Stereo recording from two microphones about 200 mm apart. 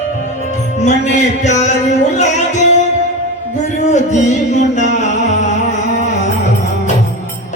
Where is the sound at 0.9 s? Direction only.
35° left (ahead or behind).